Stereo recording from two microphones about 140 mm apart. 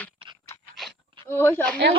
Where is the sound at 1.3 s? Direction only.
15° left (ahead or behind).